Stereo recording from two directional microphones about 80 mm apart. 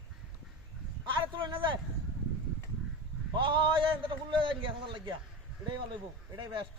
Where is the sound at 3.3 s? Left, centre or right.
Right.